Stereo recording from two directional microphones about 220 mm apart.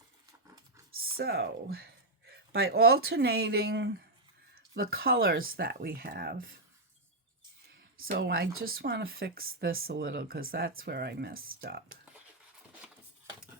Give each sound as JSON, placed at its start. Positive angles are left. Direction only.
{"t": 1.1, "sound": "speech", "side_deg": -45}
{"t": 8.0, "sound": "speech", "side_deg": -40}